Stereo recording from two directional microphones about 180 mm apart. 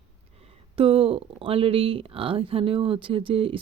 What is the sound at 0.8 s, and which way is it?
Speech, 30° right (ahead or behind).